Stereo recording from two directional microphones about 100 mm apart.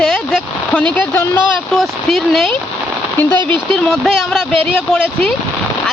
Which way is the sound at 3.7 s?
5° left (ahead or behind).